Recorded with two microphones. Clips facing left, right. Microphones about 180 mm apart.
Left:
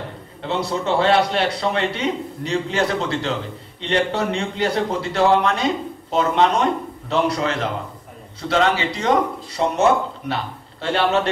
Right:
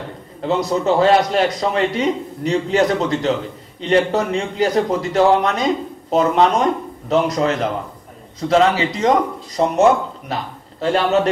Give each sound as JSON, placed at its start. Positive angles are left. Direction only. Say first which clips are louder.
{"t": 0.5, "sound": "a man's voice", "louder": "right 4 dB", "side_deg": -40}